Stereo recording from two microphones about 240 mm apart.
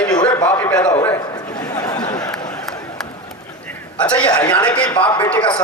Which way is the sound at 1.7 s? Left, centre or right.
Centre.